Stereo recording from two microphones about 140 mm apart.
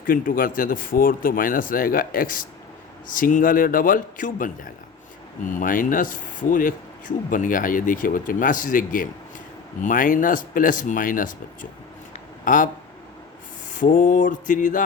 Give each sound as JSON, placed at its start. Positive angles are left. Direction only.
{"t": 0.0, "sound": "speech", "side_deg": 85}
{"t": 13.7, "sound": "speech", "side_deg": 70}